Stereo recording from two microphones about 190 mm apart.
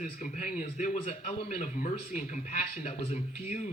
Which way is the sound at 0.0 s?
45° left (ahead or behind).